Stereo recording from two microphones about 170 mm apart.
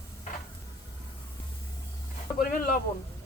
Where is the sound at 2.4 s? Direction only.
55° left (ahead or behind).